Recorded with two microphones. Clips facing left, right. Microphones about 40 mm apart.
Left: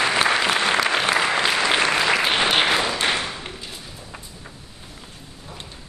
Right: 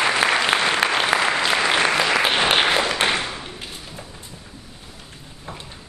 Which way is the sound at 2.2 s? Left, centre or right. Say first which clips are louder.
Right 1 dB; centre.